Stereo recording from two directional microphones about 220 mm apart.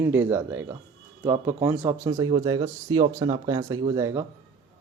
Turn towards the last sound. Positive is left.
turn(degrees=-15)  # may be behind; listen again after turning